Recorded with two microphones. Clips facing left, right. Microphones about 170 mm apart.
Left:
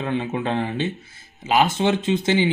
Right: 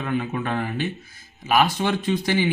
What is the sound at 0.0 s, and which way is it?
Speech, 25° left (ahead or behind).